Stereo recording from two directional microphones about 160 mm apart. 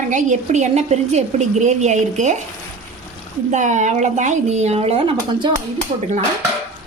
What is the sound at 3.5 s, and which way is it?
A woman's voice, 50° right (ahead or behind).